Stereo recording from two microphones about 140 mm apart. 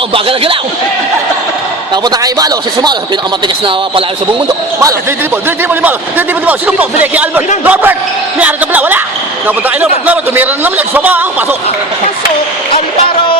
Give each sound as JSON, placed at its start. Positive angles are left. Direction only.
{"t": 0.1, "sound": "speech", "side_deg": -40}
{"t": 1.9, "sound": "a man's voice", "side_deg": -30}
{"t": 3.4, "sound": "speech", "side_deg": -40}
{"t": 5.5, "sound": "a man's voice", "side_deg": -15}